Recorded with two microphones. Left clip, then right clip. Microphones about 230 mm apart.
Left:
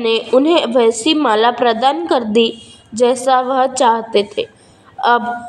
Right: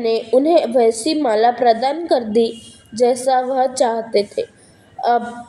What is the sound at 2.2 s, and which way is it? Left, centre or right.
A woman's voice, left.